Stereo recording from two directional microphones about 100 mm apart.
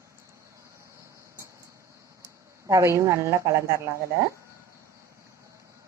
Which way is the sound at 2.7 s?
30° right (ahead or behind).